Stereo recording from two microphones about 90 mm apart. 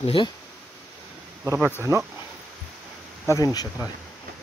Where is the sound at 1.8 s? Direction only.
30° right (ahead or behind).